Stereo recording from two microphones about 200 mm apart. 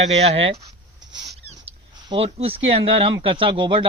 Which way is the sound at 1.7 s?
20° right (ahead or behind).